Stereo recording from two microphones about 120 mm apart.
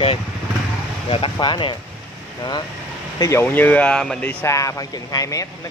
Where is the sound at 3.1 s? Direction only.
30° left (ahead or behind).